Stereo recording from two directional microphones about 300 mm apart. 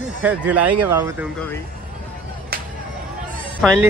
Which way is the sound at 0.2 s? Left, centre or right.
Centre.